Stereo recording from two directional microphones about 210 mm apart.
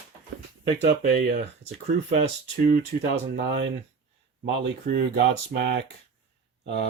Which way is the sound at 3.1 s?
55° right (ahead or behind).